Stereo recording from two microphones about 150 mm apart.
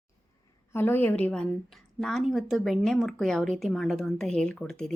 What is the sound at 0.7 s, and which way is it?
A woman's voice, 15° left (ahead or behind).